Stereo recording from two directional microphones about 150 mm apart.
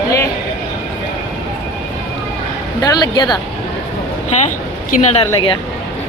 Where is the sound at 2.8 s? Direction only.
25° left (ahead or behind).